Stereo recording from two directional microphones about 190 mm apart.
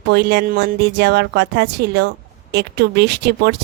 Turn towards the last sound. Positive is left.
turn(degrees=-60)  # may be behind; listen again after turning